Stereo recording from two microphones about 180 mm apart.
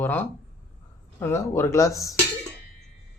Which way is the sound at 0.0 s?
10° left (ahead or behind).